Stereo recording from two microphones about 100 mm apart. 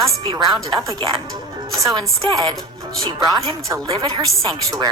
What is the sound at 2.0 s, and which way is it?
A woman's voice, 45° right (ahead or behind).